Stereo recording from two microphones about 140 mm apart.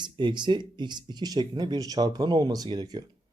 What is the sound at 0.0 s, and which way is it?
Speech, 35° right (ahead or behind).